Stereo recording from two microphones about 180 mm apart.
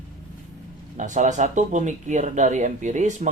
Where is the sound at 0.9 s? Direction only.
45° right (ahead or behind).